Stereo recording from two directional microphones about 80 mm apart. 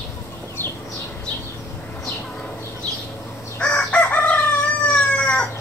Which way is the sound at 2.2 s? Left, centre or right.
Centre.